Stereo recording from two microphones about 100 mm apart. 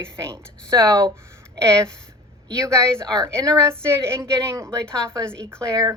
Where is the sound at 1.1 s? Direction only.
25° right (ahead or behind).